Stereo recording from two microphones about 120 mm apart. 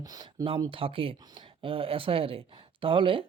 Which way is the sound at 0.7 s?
50° right (ahead or behind).